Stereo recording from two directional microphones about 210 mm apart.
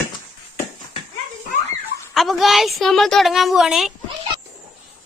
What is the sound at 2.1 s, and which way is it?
A woman's voice, centre (ahead or behind).